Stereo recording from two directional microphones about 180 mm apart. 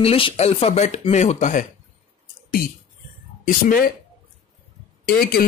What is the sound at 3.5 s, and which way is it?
Speech, 50° left (ahead or behind).